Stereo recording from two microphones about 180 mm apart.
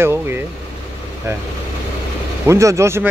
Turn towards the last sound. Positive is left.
turn(degrees=-15)  # may be behind; listen again after turning